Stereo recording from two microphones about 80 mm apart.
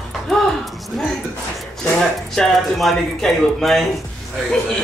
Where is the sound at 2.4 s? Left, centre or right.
Centre.